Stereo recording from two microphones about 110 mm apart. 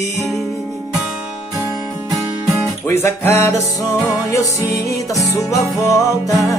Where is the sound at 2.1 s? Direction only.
Centre (ahead or behind).